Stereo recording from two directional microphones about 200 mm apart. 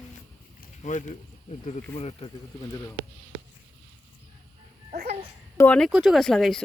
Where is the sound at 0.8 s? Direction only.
40° left (ahead or behind).